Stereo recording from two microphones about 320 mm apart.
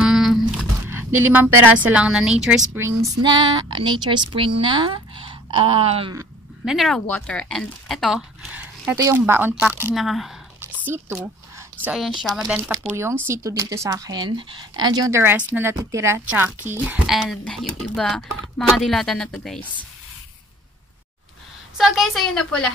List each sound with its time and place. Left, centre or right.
0.0 s a sound: centre
1.3 s a woman's voice: centre
6.6 s a woman's voice: centre
21.7 s a woman's voice: centre